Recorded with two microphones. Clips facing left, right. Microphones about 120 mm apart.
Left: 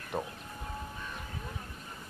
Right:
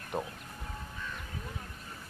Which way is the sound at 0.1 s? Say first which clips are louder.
Even; centre (ahead or behind).